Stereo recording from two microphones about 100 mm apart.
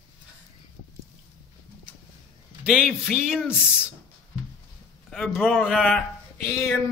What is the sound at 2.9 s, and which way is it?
Speech, 5° right (ahead or behind).